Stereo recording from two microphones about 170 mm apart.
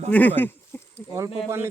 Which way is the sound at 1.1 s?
15° right (ahead or behind).